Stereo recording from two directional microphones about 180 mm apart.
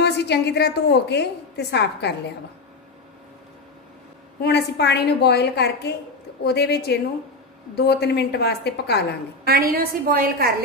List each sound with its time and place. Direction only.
0.0 s a woman's voice: 70° left (ahead or behind)
4.4 s a woman's voice: 65° left (ahead or behind)
9.5 s a woman's voice: 55° right (ahead or behind)